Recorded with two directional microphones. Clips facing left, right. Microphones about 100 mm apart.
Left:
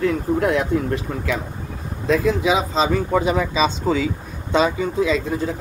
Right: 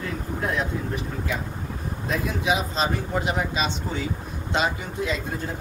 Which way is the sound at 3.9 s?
90° left.